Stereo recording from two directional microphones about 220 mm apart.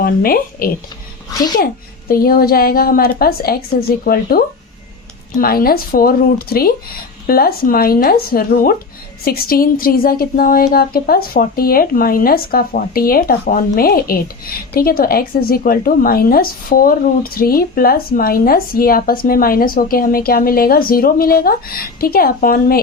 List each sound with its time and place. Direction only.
0.0 s speech: 40° left (ahead or behind)
1.3 s speech: 15° left (ahead or behind)
1.5 s a woman's voice: 40° left (ahead or behind)